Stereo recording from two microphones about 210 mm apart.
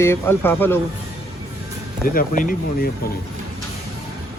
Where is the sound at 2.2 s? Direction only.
40° left (ahead or behind).